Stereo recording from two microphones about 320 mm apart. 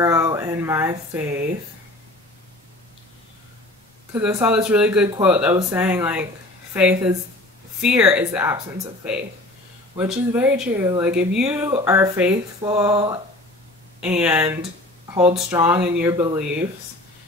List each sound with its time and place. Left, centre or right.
0.0 s speech: centre
4.1 s speech: centre
9.9 s speech: centre
14.0 s speech: centre